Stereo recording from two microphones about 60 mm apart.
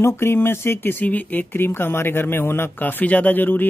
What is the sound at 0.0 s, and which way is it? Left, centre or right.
Speech, left.